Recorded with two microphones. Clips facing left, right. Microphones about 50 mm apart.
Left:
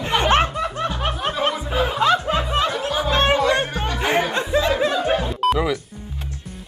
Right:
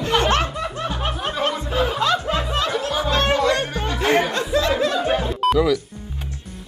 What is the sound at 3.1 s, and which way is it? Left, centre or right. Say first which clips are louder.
Chatter: left 2 dB; left.